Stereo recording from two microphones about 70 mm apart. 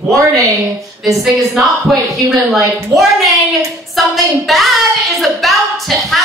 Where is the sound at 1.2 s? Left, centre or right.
Centre.